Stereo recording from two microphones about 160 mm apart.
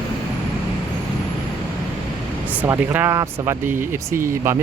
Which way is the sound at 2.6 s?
15° right (ahead or behind).